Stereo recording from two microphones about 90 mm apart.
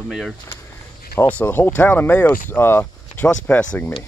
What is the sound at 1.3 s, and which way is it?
Speech, 20° left (ahead or behind).